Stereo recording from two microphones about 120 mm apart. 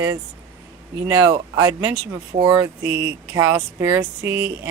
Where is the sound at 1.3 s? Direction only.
35° right (ahead or behind).